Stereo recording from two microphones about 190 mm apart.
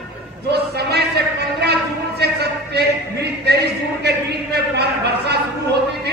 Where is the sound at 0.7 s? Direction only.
60° right (ahead or behind).